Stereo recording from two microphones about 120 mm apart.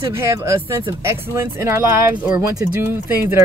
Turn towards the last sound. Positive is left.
turn(degrees=-20)  # may be behind; listen again after turning